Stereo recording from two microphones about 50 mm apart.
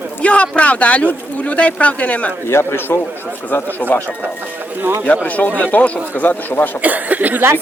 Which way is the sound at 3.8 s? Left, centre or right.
Left.